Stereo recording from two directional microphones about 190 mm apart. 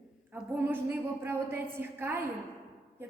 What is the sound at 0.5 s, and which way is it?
A woman's voice, 10° right (ahead or behind).